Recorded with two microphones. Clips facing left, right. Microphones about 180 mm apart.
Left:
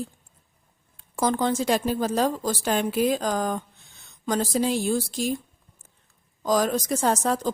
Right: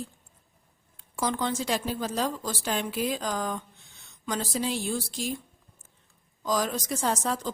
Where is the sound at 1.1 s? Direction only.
45° left (ahead or behind).